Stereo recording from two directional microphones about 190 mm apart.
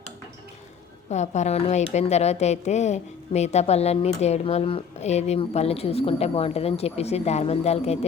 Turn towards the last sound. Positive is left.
turn(degrees=35)  # may be behind; listen again after turning